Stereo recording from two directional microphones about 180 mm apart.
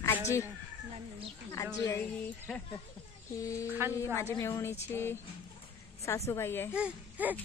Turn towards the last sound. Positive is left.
turn(degrees=-10)  # may be behind; listen again after turning